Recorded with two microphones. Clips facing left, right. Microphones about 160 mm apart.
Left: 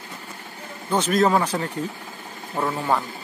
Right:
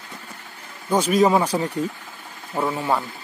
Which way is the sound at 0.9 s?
10° right (ahead or behind).